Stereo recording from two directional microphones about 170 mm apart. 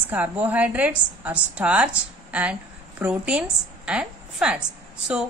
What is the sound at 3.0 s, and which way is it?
A woman's voice, 5° right (ahead or behind).